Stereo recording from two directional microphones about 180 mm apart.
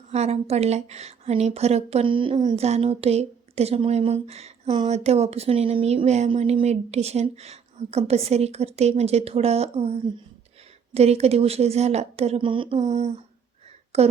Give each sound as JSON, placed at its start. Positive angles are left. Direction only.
{"t": 0.1, "sound": "a woman's voice", "side_deg": -35}
{"t": 12.7, "sound": "a woman's voice", "side_deg": -40}